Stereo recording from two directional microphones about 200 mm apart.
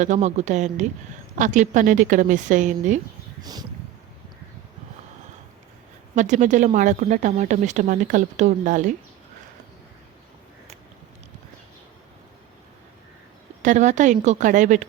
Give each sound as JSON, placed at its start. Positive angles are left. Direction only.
{"t": 0.0, "sound": "speech", "side_deg": -35}
{"t": 3.4, "sound": "speech", "side_deg": -20}
{"t": 6.1, "sound": "speech", "side_deg": -35}
{"t": 13.6, "sound": "speech", "side_deg": -35}